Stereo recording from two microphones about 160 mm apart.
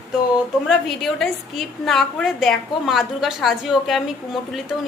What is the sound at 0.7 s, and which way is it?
A woman's voice, centre (ahead or behind).